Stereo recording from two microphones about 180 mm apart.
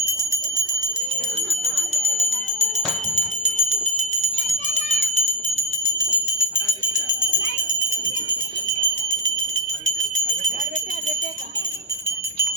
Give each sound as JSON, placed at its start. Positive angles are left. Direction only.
{"t": 0.0, "sound": "jingle bell", "side_deg": -15}
{"t": 1.5, "sound": "jingle bell", "side_deg": -35}
{"t": 3.4, "sound": "bell", "side_deg": -40}
{"t": 4.9, "sound": "a sound", "side_deg": -35}